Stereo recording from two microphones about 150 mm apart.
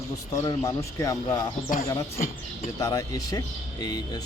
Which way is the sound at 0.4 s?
20° left (ahead or behind).